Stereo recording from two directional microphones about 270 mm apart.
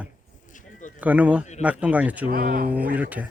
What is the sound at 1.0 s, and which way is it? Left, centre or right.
Speech, centre.